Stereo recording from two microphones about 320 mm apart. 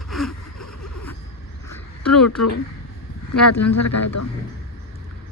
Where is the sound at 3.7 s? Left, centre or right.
Left.